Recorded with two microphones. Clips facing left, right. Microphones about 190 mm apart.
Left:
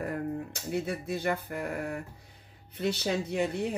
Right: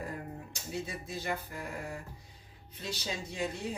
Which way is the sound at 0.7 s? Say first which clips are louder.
Left 7 dB; 60° left (ahead or behind).